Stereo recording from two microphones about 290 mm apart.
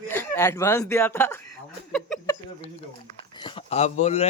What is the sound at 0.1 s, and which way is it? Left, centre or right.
Speech, centre.